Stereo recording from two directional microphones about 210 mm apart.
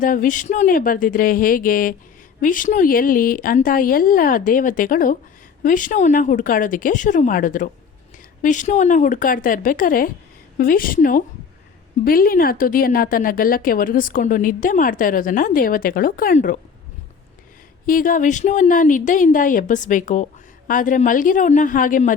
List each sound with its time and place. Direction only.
0.0 s a woman's voice: 40° left (ahead or behind)
17.8 s a woman's voice: 40° left (ahead or behind)